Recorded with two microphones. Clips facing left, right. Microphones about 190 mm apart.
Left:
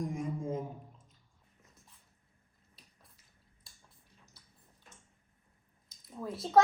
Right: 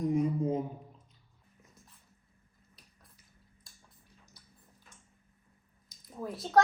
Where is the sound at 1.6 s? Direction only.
Centre (ahead or behind).